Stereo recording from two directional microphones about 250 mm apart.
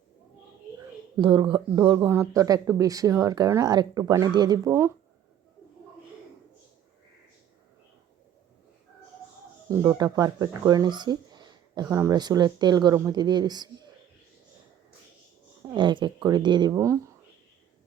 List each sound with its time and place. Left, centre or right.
1.1 s speech: centre
9.6 s speech: centre
15.7 s speech: centre